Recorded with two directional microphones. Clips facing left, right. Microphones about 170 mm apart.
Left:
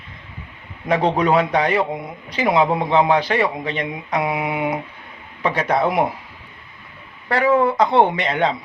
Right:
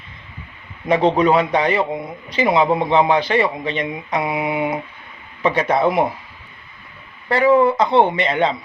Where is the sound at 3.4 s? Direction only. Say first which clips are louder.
Right 1 dB; 15° right (ahead or behind).